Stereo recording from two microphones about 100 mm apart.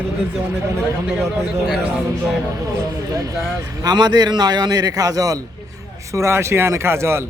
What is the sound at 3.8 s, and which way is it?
A man's voice, 45° right (ahead or behind).